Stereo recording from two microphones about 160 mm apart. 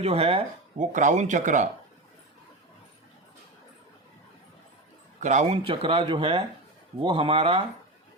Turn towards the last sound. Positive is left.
turn(degrees=-35)  # may be behind; listen again after turning